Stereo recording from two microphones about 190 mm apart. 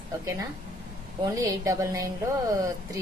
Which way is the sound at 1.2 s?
20° right (ahead or behind).